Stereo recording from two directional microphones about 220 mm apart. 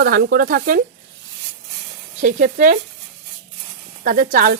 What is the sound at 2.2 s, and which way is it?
Speech, 35° right (ahead or behind).